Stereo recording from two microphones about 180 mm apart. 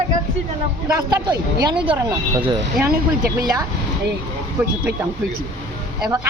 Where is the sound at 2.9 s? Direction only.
55° right (ahead or behind).